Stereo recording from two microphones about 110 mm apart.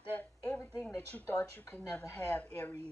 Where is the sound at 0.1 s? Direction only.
10° left (ahead or behind).